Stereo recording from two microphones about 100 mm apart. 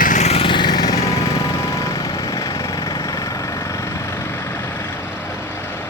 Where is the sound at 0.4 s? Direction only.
50° left (ahead or behind); by 1.3 s 35° left (ahead or behind).